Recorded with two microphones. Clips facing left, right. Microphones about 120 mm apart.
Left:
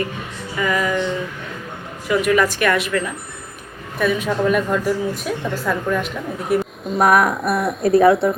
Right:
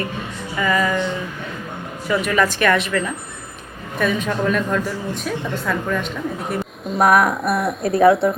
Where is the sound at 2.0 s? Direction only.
10° left (ahead or behind).